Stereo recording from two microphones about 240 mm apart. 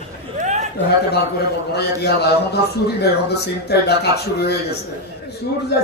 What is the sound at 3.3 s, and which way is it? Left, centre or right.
A man's voice, left.